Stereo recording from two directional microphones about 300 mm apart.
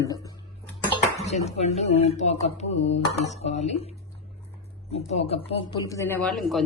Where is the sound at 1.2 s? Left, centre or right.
Left.